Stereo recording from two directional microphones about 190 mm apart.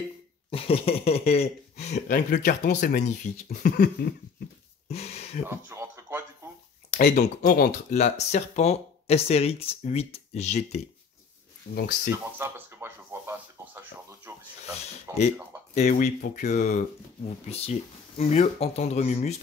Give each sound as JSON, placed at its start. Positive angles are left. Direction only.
{"t": 0.5, "sound": "speech", "side_deg": 30}
{"t": 2.0, "sound": "speech", "side_deg": 45}
{"t": 4.8, "sound": "a sound", "side_deg": 35}
{"t": 5.5, "sound": "radio", "side_deg": -15}
{"t": 7.0, "sound": "speech", "side_deg": 55}
{"t": 7.9, "sound": "speech", "side_deg": 35}
{"t": 11.7, "sound": "speech", "side_deg": 55}
{"t": 12.4, "sound": "a sound", "side_deg": -15}
{"t": 15.1, "sound": "speech", "side_deg": -15}
{"t": 15.7, "sound": "speech", "side_deg": 40}